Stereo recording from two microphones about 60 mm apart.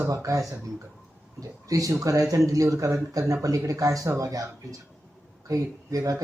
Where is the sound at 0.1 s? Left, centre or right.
Right.